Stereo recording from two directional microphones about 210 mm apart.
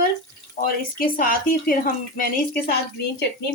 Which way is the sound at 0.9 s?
45° left (ahead or behind).